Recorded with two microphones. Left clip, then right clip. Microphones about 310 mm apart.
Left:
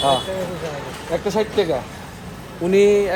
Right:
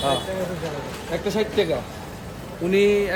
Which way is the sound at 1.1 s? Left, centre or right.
Centre.